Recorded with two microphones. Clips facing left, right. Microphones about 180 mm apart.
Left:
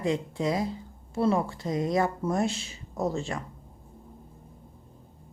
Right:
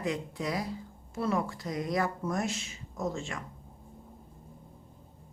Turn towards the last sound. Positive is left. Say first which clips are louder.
# left 5 dB
turn(degrees=35)  # may be behind; listen again after turning